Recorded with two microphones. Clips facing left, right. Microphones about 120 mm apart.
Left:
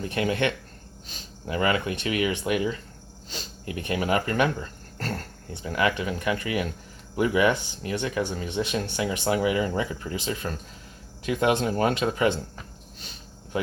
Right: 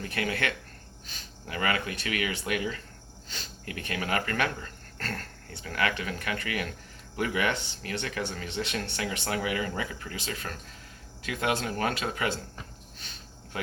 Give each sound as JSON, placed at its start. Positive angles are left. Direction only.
{"t": 0.0, "sound": "speech", "side_deg": 25}